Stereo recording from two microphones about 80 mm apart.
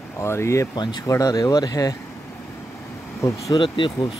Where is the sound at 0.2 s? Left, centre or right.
Left.